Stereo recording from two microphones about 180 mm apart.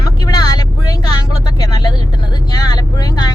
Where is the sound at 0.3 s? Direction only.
20° left (ahead or behind).